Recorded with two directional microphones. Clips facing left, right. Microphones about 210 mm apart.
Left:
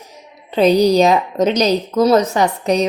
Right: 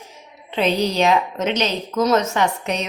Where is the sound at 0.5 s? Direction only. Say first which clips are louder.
Left 8 dB; 40° left (ahead or behind).